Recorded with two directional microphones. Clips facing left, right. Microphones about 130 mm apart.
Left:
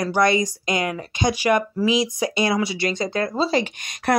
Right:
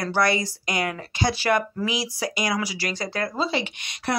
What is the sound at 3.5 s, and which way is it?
Speech, 40° left (ahead or behind).